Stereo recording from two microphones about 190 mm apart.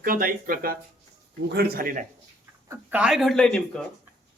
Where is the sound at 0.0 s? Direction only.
50° right (ahead or behind).